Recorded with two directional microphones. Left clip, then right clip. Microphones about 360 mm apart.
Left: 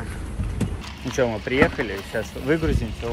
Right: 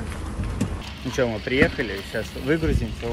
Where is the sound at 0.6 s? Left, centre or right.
Centre.